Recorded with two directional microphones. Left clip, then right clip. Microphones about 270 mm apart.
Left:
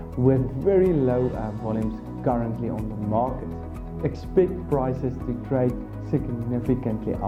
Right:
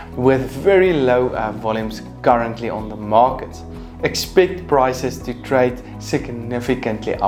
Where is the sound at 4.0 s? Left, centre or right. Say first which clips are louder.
Right 7 dB; centre.